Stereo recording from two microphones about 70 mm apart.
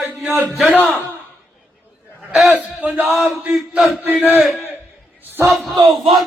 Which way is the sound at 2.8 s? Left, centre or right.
Right.